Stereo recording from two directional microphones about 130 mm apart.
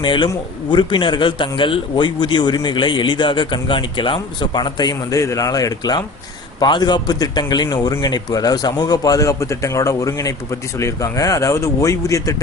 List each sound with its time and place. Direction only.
0.0 s a man's voice: 40° left (ahead or behind)